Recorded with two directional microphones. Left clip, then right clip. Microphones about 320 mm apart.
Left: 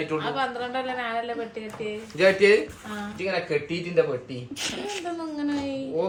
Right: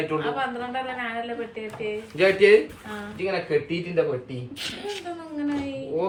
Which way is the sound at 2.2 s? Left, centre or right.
Centre.